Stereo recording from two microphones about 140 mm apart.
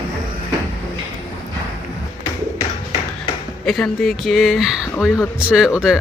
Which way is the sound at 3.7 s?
Centre (ahead or behind).